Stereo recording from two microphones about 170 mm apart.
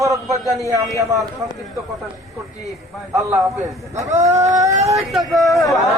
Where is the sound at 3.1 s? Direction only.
20° right (ahead or behind).